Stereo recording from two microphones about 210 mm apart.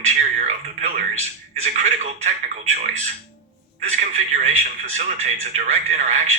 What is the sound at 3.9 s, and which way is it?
Speech, 35° right (ahead or behind).